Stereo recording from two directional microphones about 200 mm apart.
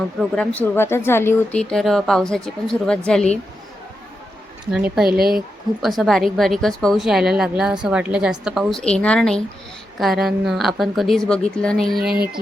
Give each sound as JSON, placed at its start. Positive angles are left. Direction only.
{"t": 0.2, "sound": "a woman's voice", "side_deg": 5}
{"t": 4.7, "sound": "a woman's voice", "side_deg": 0}
{"t": 5.0, "sound": "speech", "side_deg": -50}
{"t": 5.8, "sound": "a woman's voice", "side_deg": 0}